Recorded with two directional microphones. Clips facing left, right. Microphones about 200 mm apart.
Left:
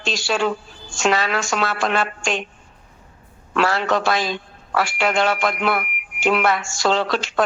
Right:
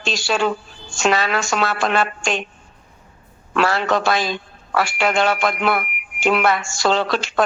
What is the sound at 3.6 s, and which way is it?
Speech, 60° right (ahead or behind).